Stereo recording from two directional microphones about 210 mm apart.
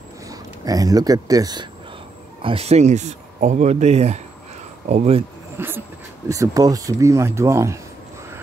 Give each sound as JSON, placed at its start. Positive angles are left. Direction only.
{"t": 0.3, "sound": "speech", "side_deg": -15}
{"t": 5.6, "sound": "speech", "side_deg": -10}